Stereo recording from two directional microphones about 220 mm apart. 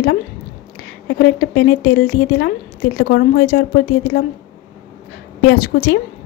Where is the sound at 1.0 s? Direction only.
50° left (ahead or behind).